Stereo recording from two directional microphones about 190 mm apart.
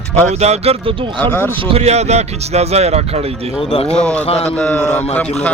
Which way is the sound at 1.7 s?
35° right (ahead or behind).